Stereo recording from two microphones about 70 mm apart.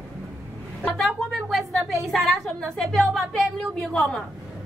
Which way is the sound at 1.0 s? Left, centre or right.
Centre.